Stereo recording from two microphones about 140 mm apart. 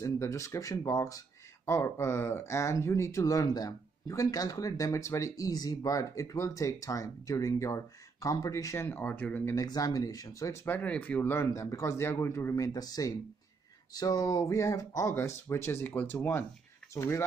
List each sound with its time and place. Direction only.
0.0 s speech: 20° left (ahead or behind)